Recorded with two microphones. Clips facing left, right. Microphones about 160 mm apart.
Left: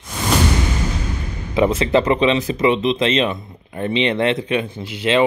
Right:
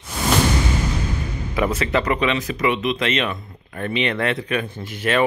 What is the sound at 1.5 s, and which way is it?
Speech, 25° left (ahead or behind).